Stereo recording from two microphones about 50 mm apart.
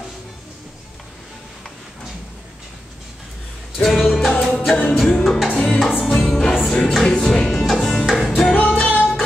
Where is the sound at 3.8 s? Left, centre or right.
Centre.